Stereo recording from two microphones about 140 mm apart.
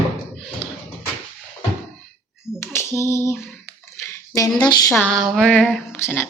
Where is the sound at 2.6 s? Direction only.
15° left (ahead or behind).